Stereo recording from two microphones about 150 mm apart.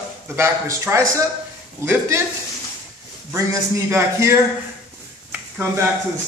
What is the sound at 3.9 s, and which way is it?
Speech, 15° right (ahead or behind).